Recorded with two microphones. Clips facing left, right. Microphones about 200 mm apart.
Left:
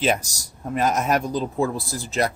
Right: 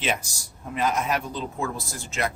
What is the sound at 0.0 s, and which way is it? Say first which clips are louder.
A man's voice: left 6 dB; 40° left (ahead or behind).